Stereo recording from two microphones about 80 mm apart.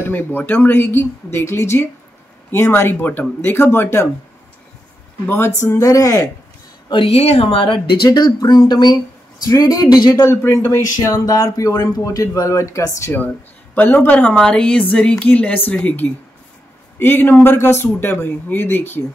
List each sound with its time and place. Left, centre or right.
0.0 s speech: left
5.2 s speech: left
5.6 s speech: left
7.6 s speech: left
10.2 s speech: left
11.1 s speech: left
13.7 s a woman's voice: left